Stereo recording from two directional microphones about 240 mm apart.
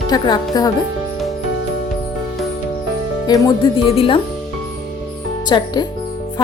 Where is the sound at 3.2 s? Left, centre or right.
Centre.